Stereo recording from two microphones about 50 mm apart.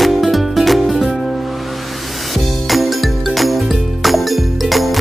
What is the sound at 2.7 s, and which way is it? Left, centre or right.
Music, centre.